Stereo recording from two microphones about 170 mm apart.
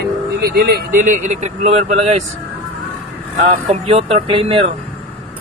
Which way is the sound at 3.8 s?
35° right (ahead or behind).